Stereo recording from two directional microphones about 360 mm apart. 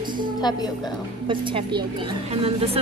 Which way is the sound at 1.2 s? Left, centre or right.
Centre.